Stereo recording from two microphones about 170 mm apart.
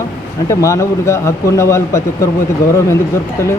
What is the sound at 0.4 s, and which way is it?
Speech, 15° left (ahead or behind).